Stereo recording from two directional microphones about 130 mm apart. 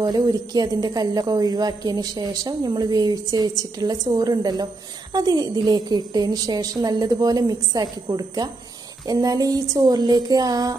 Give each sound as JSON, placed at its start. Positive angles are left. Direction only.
{"t": 0.0, "sound": "a woman's voice", "side_deg": -30}